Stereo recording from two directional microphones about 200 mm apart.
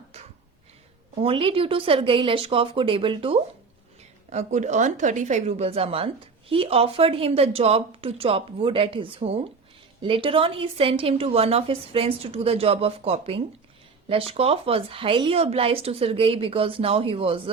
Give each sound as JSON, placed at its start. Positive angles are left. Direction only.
{"t": 1.2, "sound": "a woman's voice", "side_deg": -25}